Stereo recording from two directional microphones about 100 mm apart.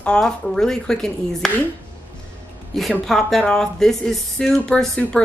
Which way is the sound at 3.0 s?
Centre (ahead or behind).